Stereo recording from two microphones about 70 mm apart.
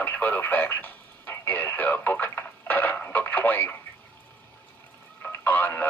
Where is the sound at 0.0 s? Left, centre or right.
Left.